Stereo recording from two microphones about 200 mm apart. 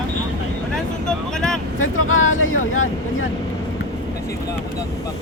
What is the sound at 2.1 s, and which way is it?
Speech, 85° left.